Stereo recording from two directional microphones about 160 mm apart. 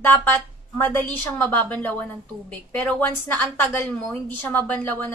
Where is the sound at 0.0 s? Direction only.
10° left (ahead or behind).